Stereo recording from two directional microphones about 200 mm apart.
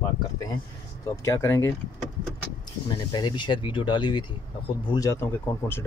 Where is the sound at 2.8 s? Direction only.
20° left (ahead or behind).